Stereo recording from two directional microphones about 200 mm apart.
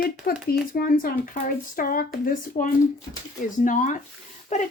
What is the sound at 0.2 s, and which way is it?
Speech, 45° left (ahead or behind).